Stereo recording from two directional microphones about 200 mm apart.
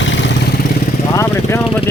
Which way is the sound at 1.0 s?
15° left (ahead or behind).